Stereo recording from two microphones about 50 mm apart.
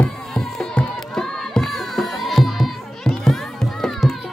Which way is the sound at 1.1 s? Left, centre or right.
Centre.